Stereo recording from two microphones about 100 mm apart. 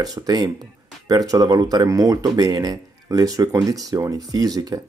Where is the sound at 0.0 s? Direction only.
40° right (ahead or behind).